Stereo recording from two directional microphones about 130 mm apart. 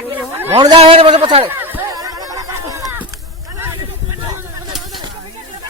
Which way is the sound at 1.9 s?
30° right (ahead or behind).